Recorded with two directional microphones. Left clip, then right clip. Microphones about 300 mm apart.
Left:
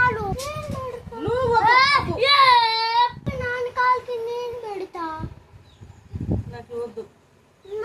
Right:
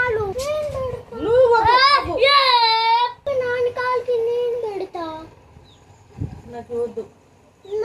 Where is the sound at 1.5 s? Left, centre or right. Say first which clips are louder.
Right 2 dB; centre.